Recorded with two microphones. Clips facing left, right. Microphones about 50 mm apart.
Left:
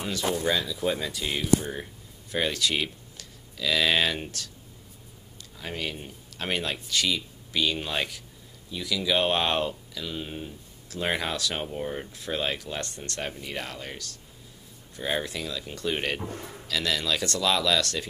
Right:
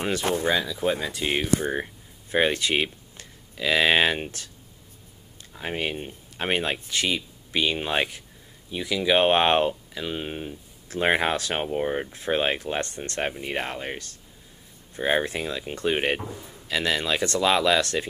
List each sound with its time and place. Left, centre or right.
0.0 s speech: right
0.7 s speech: right
5.6 s speech: right
16.3 s a man's voice: left
16.6 s speech: right